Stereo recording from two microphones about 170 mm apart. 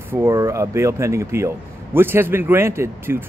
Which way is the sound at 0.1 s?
15° right (ahead or behind).